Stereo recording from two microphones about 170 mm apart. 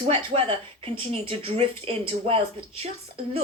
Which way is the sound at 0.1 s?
35° right (ahead or behind).